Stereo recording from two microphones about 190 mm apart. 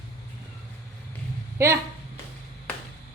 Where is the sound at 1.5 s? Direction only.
15° right (ahead or behind).